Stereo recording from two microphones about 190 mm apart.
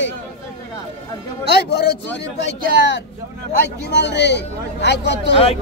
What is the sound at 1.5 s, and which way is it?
Speech, 60° left (ahead or behind).